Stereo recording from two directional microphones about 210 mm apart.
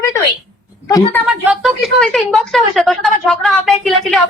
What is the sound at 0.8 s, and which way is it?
Speech, 15° left (ahead or behind).